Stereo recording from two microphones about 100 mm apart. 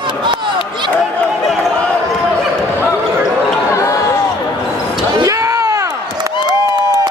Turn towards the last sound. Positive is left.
turn(degrees=-35)  # may be behind; listen again after turning